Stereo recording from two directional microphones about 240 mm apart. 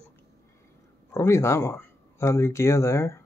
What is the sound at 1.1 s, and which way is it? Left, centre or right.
Speech, centre.